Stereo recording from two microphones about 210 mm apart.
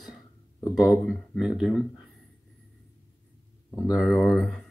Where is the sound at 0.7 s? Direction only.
Centre (ahead or behind).